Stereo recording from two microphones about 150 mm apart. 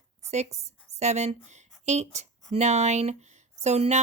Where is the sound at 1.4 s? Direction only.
50° right (ahead or behind).